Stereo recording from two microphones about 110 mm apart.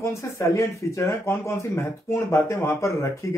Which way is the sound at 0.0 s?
25° left (ahead or behind).